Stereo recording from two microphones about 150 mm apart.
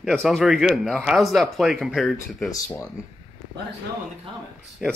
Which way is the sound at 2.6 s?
20° left (ahead or behind).